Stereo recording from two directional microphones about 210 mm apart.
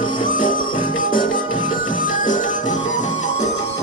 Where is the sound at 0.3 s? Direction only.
40° left (ahead or behind).